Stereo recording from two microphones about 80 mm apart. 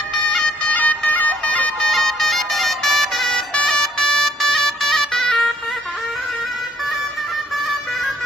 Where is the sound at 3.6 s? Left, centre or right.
Centre.